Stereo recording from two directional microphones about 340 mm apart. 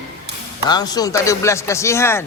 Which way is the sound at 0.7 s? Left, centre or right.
Centre.